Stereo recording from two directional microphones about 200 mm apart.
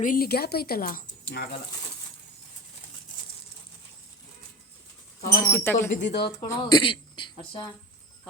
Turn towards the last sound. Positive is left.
turn(degrees=25)  # may be behind; listen again after turning